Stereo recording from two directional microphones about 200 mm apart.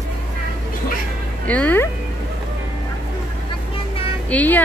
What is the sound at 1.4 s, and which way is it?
Music, 5° left (ahead or behind).